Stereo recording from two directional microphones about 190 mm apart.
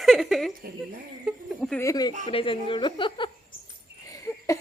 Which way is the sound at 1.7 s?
20° left (ahead or behind).